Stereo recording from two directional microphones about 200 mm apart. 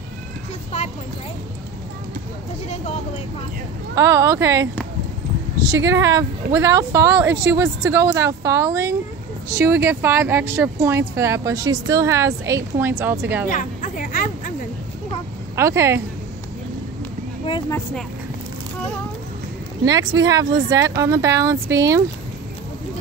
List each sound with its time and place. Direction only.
0.7 s a sound: 35° left (ahead or behind)
3.9 s speech: 15° right (ahead or behind)
5.7 s speech: 15° right (ahead or behind)
13.5 s a sound: 40° left (ahead or behind)
15.5 s speech: 15° right (ahead or behind)
17.5 s speech: 20° left (ahead or behind)
19.8 s speech: 20° right (ahead or behind)